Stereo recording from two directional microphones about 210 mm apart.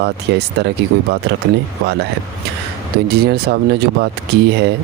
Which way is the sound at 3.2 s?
50° right (ahead or behind).